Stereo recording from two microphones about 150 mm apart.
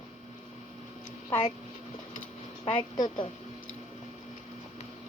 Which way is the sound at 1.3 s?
40° left (ahead or behind).